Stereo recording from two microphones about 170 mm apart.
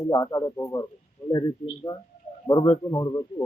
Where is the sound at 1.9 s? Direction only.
15° left (ahead or behind).